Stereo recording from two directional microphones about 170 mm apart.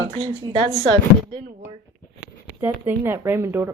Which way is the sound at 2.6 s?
15° right (ahead or behind).